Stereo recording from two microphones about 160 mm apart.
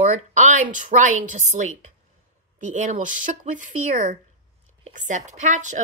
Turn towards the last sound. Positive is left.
turn(degrees=-50)  # may be behind; listen again after turning